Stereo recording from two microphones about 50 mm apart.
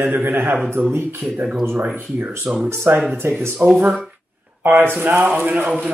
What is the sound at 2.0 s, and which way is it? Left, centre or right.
Speech, right.